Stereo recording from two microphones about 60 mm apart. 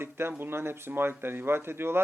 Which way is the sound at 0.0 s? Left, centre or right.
Right.